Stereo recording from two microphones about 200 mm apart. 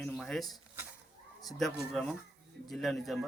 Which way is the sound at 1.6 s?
Centre (ahead or behind).